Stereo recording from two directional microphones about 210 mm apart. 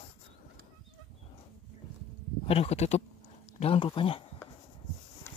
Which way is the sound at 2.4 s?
30° left (ahead or behind).